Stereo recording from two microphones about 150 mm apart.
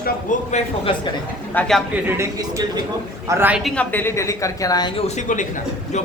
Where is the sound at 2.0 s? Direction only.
20° right (ahead or behind).